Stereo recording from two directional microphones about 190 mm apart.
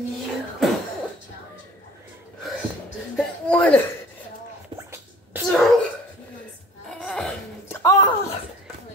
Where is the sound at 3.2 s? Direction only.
5° left (ahead or behind).